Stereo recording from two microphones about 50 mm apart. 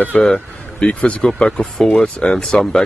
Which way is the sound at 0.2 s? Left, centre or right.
Centre.